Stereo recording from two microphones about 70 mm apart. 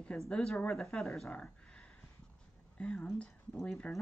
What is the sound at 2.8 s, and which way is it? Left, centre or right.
Speech, centre.